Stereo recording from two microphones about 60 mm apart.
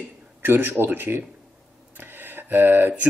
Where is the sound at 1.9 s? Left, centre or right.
Right.